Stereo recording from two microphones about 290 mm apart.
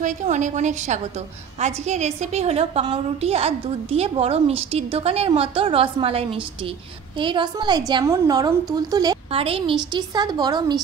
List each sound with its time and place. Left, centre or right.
0.0 s a woman's voice: right